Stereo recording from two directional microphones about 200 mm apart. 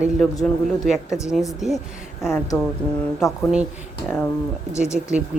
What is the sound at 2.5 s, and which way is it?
Speech, 15° left (ahead or behind).